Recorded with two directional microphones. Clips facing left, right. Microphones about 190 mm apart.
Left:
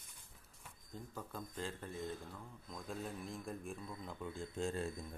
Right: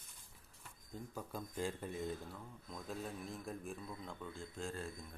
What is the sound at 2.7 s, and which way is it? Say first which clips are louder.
A man's voice: even; centre (ahead or behind).